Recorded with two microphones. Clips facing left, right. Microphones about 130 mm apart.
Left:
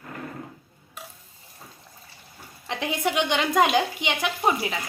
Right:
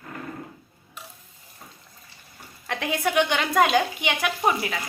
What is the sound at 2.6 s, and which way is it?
A woman's voice, 20° left (ahead or behind).